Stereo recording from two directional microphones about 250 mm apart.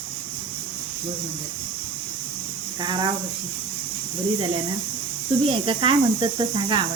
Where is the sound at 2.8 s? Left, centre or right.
Centre.